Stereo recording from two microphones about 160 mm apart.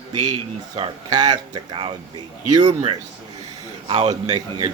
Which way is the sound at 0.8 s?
25° right (ahead or behind).